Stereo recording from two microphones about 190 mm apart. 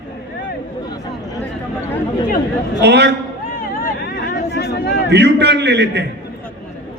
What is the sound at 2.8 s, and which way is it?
Speech, 65° right (ahead or behind).